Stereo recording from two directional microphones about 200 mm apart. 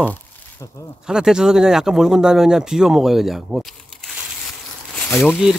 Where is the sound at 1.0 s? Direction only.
5° right (ahead or behind).